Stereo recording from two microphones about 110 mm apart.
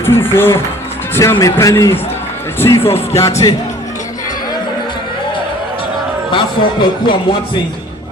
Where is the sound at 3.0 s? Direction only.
25° left (ahead or behind).